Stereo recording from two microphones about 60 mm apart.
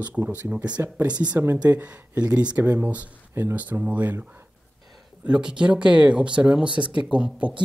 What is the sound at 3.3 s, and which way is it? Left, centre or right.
Speech, right.